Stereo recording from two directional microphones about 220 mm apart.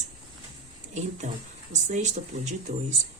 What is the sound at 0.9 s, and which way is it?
Speech, 35° right (ahead or behind).